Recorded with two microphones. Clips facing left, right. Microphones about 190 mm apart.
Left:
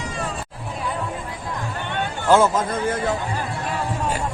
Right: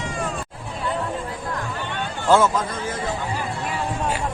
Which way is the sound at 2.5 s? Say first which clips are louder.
Left 4 dB; 55° left (ahead or behind).